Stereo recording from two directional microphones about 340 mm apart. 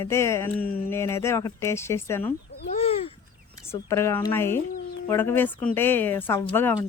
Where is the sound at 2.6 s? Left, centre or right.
Centre.